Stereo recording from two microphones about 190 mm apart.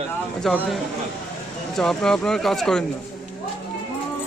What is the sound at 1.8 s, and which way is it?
Speech, 5° left (ahead or behind).